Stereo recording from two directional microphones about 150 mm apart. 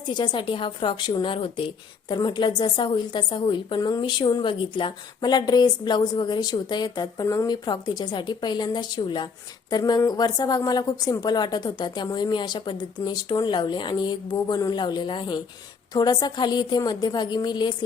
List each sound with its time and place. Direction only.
0.1 s speech: 30° left (ahead or behind)